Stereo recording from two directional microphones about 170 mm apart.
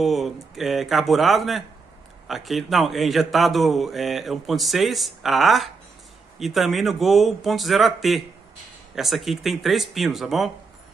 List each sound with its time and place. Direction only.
0.0 s a man's voice: centre (ahead or behind)